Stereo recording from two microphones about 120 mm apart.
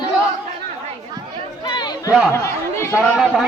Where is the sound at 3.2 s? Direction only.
5° right (ahead or behind).